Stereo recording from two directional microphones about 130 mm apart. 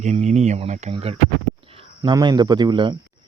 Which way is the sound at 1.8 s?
35° right (ahead or behind).